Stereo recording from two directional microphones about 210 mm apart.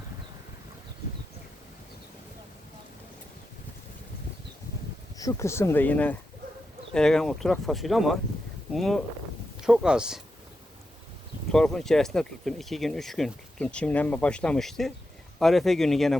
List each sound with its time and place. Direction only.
5.1 s speech: 15° left (ahead or behind); by 10.2 s 5° right (ahead or behind)
11.5 s speech: centre (ahead or behind)